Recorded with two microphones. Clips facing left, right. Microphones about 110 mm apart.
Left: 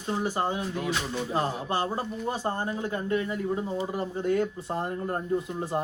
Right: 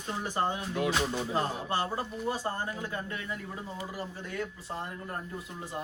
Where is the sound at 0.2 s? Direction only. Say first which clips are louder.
Left 1 dB; 15° left (ahead or behind).